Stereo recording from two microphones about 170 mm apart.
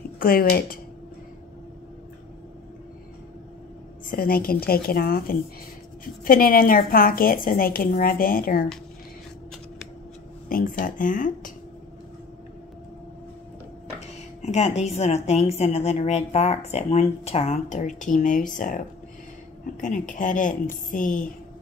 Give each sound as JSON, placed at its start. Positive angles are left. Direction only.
{"t": 0.2, "sound": "a woman's voice", "side_deg": 60}
{"t": 4.1, "sound": "a woman's voice", "side_deg": 60}
{"t": 10.5, "sound": "speech", "side_deg": 55}
{"t": 14.4, "sound": "a woman's voice", "side_deg": 40}